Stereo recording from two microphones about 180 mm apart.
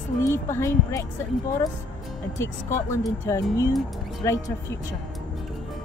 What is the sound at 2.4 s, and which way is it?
Speech, 15° left (ahead or behind).